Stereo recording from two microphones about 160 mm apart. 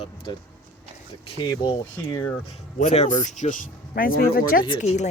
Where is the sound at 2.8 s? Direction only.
45° left (ahead or behind); by 4.6 s 65° left (ahead or behind).